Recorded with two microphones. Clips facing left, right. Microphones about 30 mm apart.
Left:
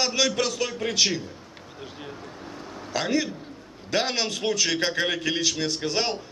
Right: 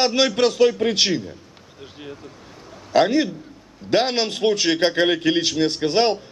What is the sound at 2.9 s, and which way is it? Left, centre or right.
A man's voice, right.